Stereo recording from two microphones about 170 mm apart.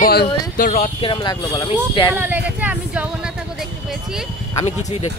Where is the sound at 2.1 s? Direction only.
10° right (ahead or behind).